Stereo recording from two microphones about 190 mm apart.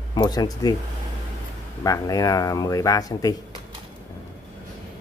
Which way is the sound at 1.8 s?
20° left (ahead or behind).